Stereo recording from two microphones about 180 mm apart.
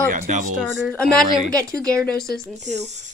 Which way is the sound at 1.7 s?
20° right (ahead or behind).